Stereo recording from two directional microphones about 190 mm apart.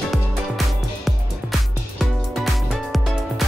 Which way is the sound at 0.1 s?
Centre (ahead or behind).